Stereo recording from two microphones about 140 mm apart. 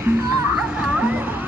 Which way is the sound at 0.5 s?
5° right (ahead or behind).